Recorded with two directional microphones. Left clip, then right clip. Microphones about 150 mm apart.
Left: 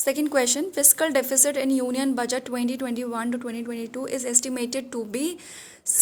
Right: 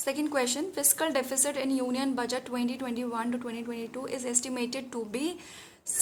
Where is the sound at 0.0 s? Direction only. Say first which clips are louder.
Left 6 dB; 40° left (ahead or behind).